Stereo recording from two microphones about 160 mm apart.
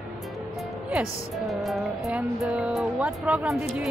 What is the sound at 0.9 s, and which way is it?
Speech, 5° right (ahead or behind).